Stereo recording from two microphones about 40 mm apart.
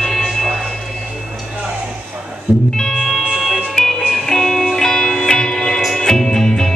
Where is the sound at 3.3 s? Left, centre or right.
Centre.